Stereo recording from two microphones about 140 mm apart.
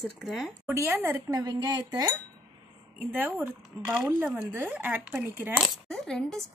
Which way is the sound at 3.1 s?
15° right (ahead or behind).